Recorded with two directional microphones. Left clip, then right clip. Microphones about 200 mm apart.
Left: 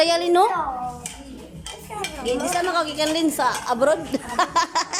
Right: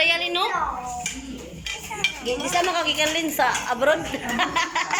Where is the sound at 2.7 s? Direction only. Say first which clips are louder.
Even; 20° left (ahead or behind).